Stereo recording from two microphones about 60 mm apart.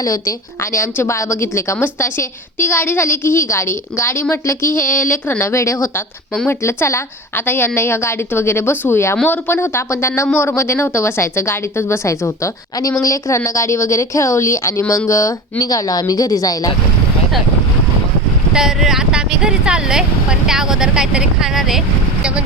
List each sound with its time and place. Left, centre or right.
0.0 s a woman's voice: left
0.6 s a woman's voice: left
5.4 s a woman's voice: left
6.5 s a woman's voice: left
7.3 s a woman's voice: left
13.4 s a woman's voice: left
18.5 s speech: centre